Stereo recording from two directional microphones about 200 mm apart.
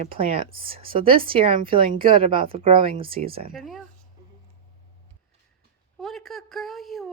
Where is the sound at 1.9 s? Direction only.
45° right (ahead or behind).